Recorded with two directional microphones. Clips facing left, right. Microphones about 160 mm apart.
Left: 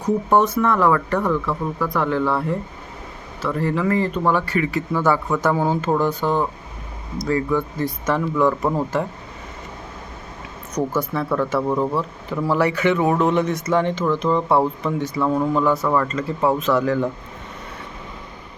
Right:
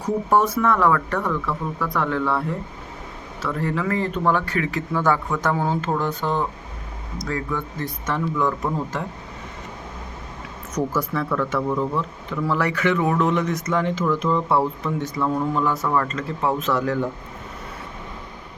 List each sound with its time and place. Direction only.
0.0 s speech: 5° right (ahead or behind)
11.3 s speech: 30° left (ahead or behind)
12.6 s speech: 5° left (ahead or behind)
13.4 s speech: 30° left (ahead or behind)
13.7 s speech: centre (ahead or behind)
14.2 s speech: 10° left (ahead or behind)
14.9 s speech: centre (ahead or behind)